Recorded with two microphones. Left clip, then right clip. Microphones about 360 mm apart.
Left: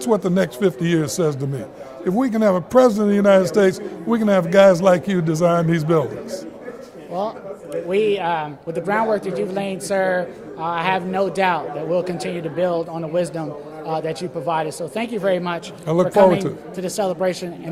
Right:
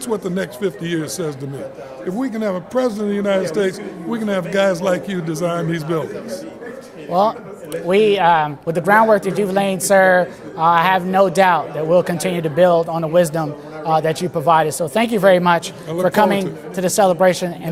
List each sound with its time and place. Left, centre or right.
0.0 s a man's voice: left
7.1 s speech: right